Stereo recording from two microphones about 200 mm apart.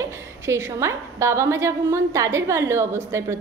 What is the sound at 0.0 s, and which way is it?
A woman's voice, 15° right (ahead or behind).